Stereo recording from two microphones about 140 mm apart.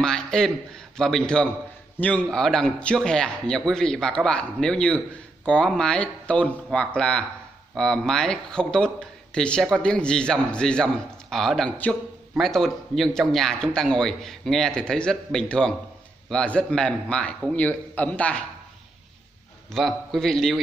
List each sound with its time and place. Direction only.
0.0 s a man's voice: 5° left (ahead or behind)
19.7 s a man's voice: centre (ahead or behind)